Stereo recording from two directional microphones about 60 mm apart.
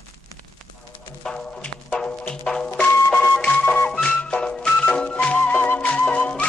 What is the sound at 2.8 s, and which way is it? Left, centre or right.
Music, left.